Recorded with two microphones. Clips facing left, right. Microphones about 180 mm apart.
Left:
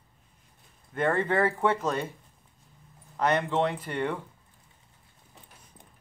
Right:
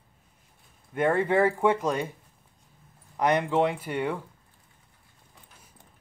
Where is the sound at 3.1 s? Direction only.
10° right (ahead or behind).